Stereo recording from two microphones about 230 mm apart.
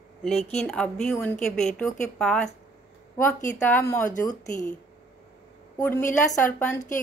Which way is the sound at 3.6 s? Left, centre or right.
Centre.